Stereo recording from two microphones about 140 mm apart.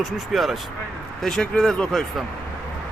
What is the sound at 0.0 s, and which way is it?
Speech, centre (ahead or behind).